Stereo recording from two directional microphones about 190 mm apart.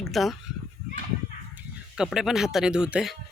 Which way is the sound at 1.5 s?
5° right (ahead or behind).